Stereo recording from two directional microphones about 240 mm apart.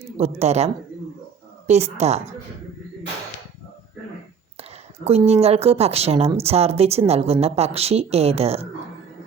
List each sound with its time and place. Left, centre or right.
0.2 s speech: right
5.0 s speech: right